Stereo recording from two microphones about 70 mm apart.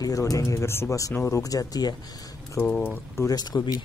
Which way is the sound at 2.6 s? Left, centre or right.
Left.